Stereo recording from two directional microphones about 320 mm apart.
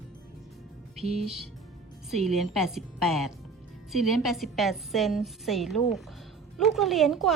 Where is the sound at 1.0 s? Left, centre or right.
Centre.